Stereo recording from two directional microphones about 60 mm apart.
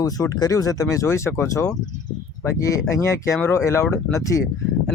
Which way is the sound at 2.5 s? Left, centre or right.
Left.